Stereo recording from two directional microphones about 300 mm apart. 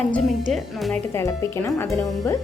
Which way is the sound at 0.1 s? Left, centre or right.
Centre.